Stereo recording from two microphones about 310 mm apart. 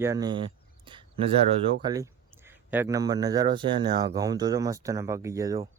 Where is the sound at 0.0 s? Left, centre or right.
Centre.